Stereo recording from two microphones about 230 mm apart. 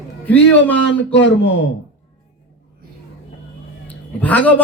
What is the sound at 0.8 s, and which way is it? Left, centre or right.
Speech, left.